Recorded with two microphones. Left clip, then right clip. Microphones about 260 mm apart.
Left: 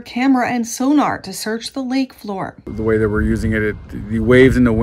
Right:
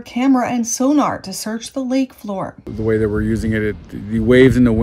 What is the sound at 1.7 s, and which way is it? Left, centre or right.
Speech, right.